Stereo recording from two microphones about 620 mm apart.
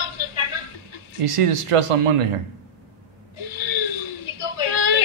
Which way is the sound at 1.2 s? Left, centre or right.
Right.